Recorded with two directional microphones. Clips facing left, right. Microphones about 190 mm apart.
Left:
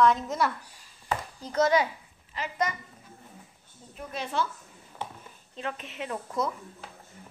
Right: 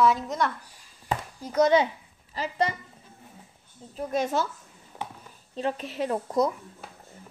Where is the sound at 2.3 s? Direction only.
30° right (ahead or behind).